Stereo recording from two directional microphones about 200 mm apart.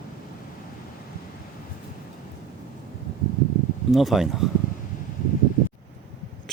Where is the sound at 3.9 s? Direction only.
Centre (ahead or behind).